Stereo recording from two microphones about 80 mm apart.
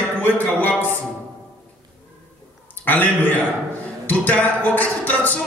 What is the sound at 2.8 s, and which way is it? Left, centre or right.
A man's voice, left.